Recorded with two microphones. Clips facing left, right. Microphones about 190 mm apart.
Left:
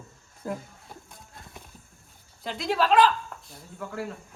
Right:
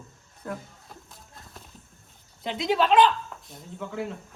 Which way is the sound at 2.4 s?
Centre (ahead or behind).